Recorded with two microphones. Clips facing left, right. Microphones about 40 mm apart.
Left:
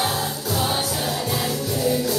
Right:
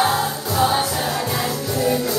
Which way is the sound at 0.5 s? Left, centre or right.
Right.